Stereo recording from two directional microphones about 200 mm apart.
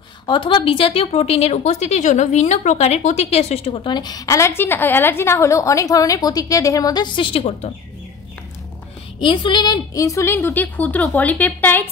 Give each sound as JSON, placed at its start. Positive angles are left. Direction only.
{"t": 0.3, "sound": "speech", "side_deg": 25}
{"t": 9.2, "sound": "a woman's voice", "side_deg": 25}